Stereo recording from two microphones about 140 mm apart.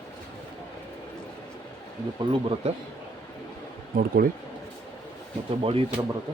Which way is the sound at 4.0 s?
90° right.